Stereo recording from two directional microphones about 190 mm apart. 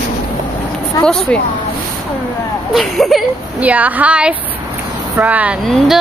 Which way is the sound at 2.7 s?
Centre (ahead or behind).